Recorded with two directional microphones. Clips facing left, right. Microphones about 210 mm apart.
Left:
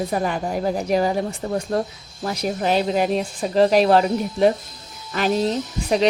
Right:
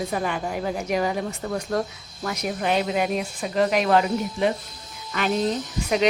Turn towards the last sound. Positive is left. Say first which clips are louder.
# left 2 dB
turn(degrees=35)  # may be behind; listen again after turning